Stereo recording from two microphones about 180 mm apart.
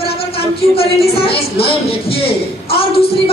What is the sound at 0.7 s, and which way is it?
Speech, 35° left (ahead or behind).